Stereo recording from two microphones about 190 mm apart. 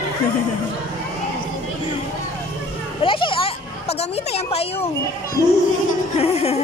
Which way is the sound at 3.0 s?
25° left (ahead or behind).